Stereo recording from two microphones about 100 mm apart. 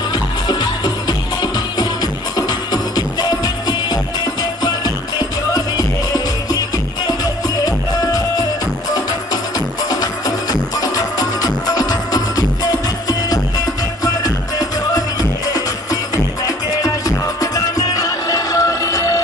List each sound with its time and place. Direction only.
0.1 s music: 45° left (ahead or behind)
5.5 s music: 40° left (ahead or behind)
7.6 s music: 40° left (ahead or behind)
9.8 s music: 40° left (ahead or behind)
14.0 s music: 40° left (ahead or behind)
16.4 s music: 40° left (ahead or behind)